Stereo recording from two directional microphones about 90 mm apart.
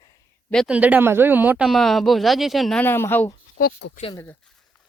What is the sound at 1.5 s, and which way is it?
Speech, 10° right (ahead or behind).